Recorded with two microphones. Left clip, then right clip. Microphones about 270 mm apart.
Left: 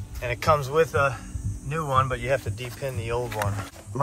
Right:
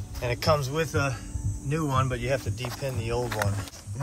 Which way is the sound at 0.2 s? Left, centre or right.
Centre.